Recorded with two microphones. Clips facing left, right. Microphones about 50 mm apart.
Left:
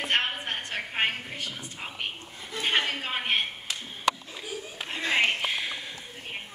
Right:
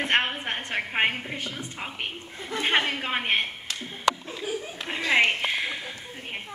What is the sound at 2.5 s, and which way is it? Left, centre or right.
Speech, right.